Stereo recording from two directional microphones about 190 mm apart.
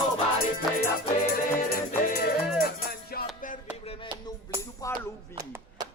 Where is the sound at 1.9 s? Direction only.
55° left (ahead or behind).